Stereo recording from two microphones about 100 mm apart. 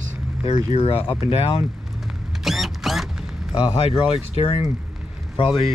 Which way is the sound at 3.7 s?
75° left (ahead or behind).